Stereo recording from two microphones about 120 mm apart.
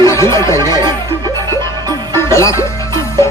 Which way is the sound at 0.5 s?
35° right (ahead or behind).